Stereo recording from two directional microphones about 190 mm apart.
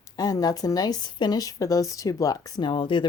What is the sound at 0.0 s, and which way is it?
Speech, 20° left (ahead or behind).